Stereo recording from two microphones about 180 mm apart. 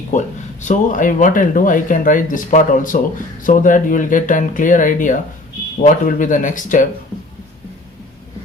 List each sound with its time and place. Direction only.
0.1 s speech: 45° left (ahead or behind)